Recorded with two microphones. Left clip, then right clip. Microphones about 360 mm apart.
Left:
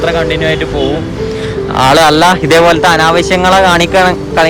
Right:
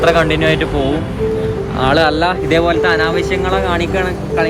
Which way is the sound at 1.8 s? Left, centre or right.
Centre.